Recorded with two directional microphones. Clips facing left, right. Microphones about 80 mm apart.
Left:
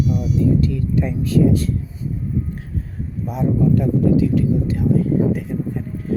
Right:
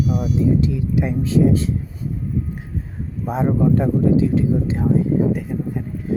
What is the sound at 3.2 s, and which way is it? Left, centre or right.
Speech, right.